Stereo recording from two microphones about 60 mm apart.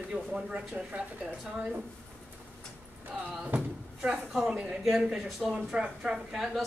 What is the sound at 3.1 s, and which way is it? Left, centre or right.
Speech, centre.